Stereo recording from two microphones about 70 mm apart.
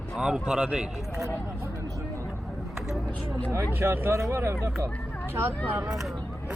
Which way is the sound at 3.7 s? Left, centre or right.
Right.